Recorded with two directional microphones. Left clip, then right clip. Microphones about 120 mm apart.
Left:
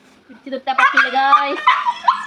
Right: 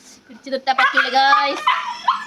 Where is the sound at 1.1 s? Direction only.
40° right (ahead or behind).